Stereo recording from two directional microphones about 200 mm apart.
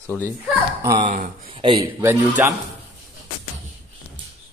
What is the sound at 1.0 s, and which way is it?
Speech, 40° right (ahead or behind).